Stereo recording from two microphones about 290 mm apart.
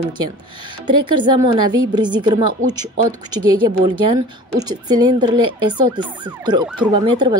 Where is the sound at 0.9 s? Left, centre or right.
Right.